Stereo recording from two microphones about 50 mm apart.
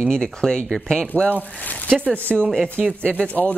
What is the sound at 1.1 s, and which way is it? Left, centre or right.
Speech, left.